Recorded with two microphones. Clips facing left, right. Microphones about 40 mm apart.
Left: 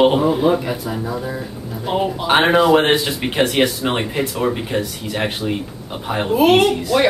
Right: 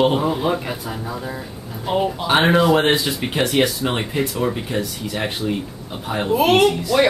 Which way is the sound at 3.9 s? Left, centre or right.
Centre.